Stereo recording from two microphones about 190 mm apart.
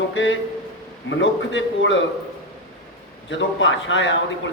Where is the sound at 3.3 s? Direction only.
80° left.